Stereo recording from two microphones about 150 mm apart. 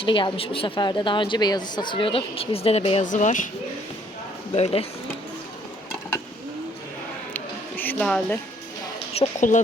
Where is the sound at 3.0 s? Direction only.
55° left (ahead or behind).